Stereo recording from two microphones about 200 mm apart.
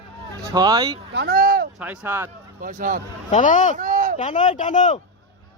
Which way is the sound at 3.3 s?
40° left (ahead or behind).